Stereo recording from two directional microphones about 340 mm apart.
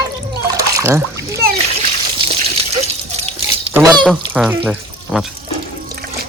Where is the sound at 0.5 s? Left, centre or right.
Centre.